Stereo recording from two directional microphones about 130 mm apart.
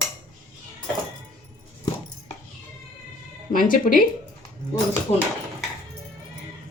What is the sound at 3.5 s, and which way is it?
Speech, 90° left.